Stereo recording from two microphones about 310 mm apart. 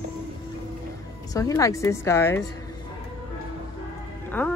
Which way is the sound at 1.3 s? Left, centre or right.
Centre.